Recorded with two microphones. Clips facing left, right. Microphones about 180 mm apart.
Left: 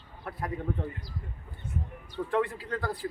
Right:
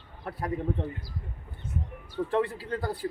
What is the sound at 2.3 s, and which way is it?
Speech, 30° right (ahead or behind).